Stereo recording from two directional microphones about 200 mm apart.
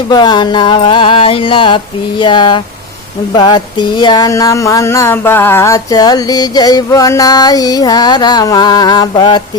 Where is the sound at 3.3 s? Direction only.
20° left (ahead or behind).